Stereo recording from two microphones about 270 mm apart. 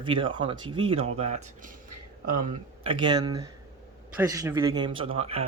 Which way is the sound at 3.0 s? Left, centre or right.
Centre.